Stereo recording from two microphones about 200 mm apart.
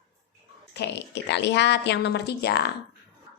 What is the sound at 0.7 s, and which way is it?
A woman's voice, 55° left (ahead or behind).